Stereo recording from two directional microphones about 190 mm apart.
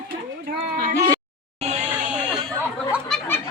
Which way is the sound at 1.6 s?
40° right (ahead or behind).